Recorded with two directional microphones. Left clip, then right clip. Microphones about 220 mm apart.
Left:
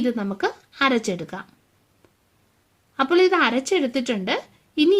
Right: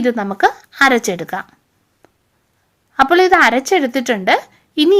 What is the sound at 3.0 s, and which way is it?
A woman's voice, 20° right (ahead or behind).